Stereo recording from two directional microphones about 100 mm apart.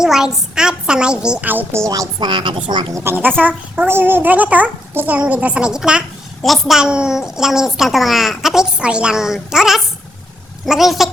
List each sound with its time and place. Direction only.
0.0 s a woman's voice: 5° right (ahead or behind)
2.1 s a woman's voice: 50° right (ahead or behind)
2.9 s a child's voice: 25° right (ahead or behind); by 11.1 s centre (ahead or behind)